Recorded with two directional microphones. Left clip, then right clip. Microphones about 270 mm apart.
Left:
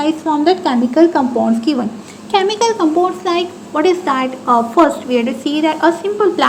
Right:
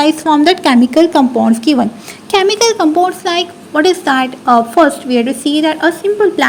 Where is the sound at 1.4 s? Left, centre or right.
Right.